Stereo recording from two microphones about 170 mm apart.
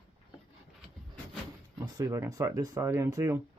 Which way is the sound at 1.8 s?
20° right (ahead or behind).